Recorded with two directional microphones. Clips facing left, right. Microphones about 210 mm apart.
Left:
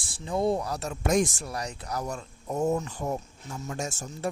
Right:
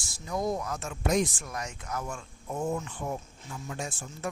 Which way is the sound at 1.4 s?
35° left (ahead or behind).